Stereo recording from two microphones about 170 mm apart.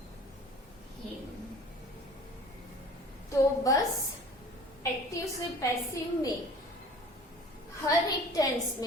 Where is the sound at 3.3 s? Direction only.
20° left (ahead or behind).